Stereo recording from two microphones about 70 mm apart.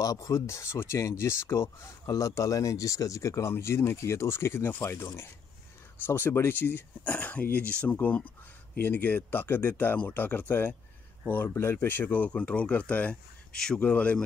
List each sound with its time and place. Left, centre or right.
0.0 s speech: left
2.0 s speech: left
11.4 s speech: left; by 14.2 s centre